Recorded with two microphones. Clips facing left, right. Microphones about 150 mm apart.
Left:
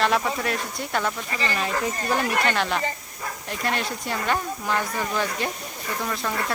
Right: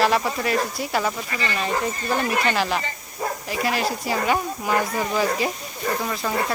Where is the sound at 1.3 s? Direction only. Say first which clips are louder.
Even; 35° left (ahead or behind).